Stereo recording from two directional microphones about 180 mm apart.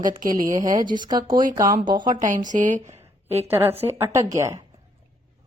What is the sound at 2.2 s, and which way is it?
Speech, 45° right (ahead or behind).